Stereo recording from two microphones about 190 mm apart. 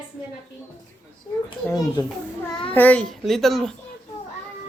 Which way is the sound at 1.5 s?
20° left (ahead or behind).